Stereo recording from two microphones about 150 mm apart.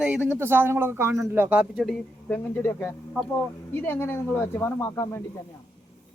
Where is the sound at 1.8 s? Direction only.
10° left (ahead or behind).